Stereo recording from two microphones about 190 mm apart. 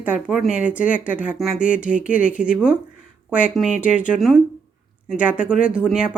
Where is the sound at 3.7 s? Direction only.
45° left (ahead or behind).